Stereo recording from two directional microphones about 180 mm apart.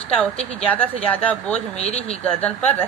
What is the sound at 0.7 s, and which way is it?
Speech, 10° left (ahead or behind).